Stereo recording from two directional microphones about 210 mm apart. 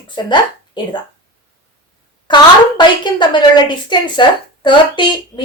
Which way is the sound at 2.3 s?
20° left (ahead or behind).